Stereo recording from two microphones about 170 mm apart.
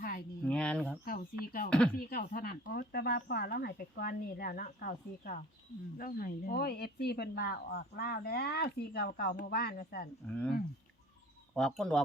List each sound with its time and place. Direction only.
0.4 s a sound: 5° left (ahead or behind)
1.0 s speech: 55° left (ahead or behind)
10.2 s speech: 5° left (ahead or behind)
11.5 s speech: 5° left (ahead or behind)